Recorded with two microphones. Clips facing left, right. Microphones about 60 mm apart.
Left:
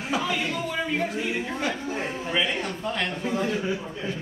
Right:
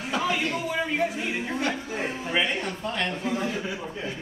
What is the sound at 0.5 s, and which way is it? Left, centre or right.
A man's voice, centre.